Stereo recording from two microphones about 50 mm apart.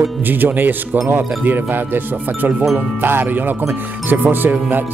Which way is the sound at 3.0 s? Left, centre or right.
Right.